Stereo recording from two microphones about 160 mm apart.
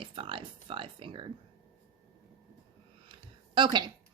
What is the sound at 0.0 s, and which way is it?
Speech, 30° right (ahead or behind).